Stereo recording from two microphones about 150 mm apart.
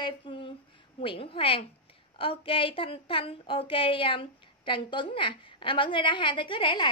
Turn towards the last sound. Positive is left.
turn(degrees=30)  # may be behind; listen again after turning